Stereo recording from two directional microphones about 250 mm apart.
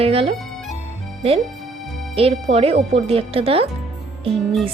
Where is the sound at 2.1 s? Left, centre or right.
Right.